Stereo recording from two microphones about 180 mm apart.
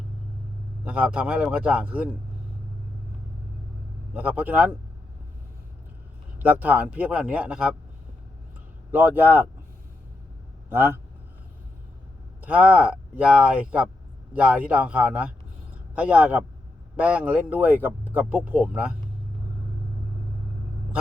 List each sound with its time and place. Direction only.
0.9 s speech: 5° right (ahead or behind)
4.1 s speech: 10° right (ahead or behind)
6.4 s speech: 10° right (ahead or behind)
8.9 s speech: 10° right (ahead or behind)
10.7 s speech: 10° right (ahead or behind)
12.4 s speech: 10° right (ahead or behind)